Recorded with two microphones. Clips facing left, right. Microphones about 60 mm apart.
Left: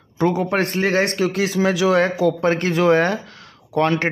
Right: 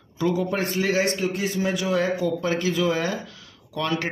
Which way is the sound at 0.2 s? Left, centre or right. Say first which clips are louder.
Left 5 dB; left.